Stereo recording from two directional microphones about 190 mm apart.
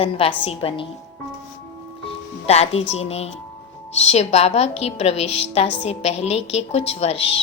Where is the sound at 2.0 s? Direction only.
35° left (ahead or behind).